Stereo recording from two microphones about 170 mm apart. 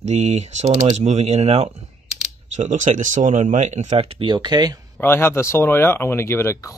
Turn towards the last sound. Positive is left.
turn(degrees=15)  # may be behind; listen again after turning